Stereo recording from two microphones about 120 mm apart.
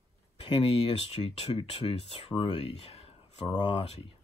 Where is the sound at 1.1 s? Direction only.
60° left (ahead or behind).